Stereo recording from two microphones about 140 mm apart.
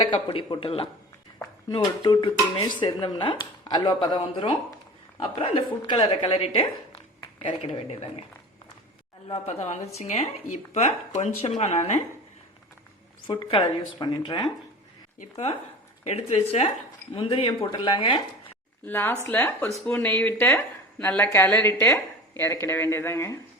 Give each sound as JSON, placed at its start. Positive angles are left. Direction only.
{"t": 0.0, "sound": "speech", "side_deg": 40}
{"t": 9.3, "sound": "a woman's voice", "side_deg": 50}
{"t": 13.2, "sound": "speech", "side_deg": 40}
{"t": 16.0, "sound": "a woman's voice", "side_deg": 50}
{"t": 18.9, "sound": "speech", "side_deg": 15}